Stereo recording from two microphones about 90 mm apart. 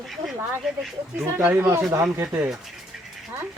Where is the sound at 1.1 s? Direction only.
25° right (ahead or behind).